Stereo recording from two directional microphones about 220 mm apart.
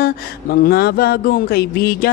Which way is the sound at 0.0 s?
45° left (ahead or behind).